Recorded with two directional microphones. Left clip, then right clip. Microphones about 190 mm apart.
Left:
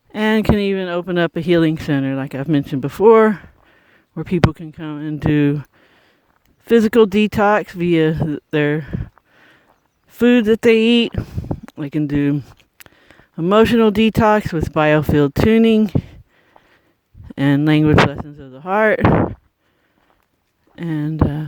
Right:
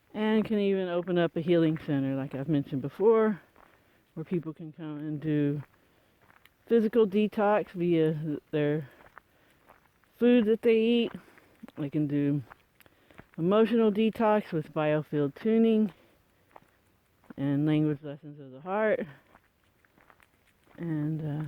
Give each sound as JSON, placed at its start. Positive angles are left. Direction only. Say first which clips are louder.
{"t": 0.1, "sound": "speech", "louder": "left 12 dB", "side_deg": 45}
{"t": 6.7, "sound": "speech", "louder": "left 12 dB", "side_deg": 50}
{"t": 10.2, "sound": "speech", "louder": "left 10 dB", "side_deg": 50}
{"t": 16.6, "sound": "a sound", "louder": "left 4 dB", "side_deg": -15}
{"t": 17.3, "sound": "speech", "louder": "left 13 dB", "side_deg": 50}
{"t": 20.7, "sound": "speech", "louder": "left 12 dB", "side_deg": 55}